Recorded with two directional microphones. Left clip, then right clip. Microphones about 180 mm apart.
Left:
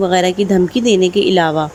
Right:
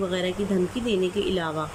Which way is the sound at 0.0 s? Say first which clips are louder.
Left 13 dB; 55° left (ahead or behind).